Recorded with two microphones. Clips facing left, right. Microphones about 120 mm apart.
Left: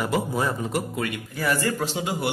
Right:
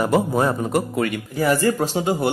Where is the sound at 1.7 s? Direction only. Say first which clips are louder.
Right 6 dB; 45° right (ahead or behind).